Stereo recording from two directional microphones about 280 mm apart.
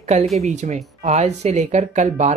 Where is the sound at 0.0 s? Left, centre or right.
Right.